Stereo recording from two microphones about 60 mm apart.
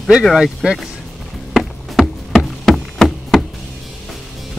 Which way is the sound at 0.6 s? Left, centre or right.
Centre.